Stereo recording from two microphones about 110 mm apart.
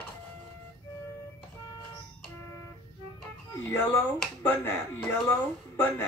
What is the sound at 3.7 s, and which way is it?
Speech, 20° left (ahead or behind).